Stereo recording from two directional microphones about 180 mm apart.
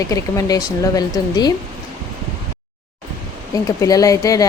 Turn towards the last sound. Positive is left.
turn(degrees=20)  # may be behind; listen again after turning